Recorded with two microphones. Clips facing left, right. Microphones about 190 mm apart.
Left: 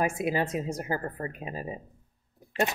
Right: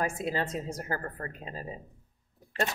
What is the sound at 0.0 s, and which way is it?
A woman's voice, 15° left (ahead or behind).